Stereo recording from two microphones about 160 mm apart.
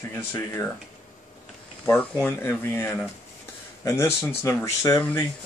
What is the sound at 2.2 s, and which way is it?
Speech, 15° left (ahead or behind).